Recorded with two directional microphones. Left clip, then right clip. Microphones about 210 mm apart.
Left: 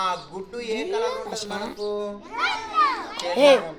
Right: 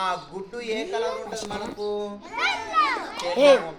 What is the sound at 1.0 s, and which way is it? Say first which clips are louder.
Speech: left 2 dB; 35° left (ahead or behind).